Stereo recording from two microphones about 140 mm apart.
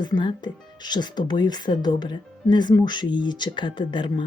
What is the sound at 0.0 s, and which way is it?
Speech, 35° left (ahead or behind).